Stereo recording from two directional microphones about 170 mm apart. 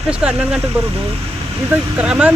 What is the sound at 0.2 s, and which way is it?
Speech, 5° right (ahead or behind).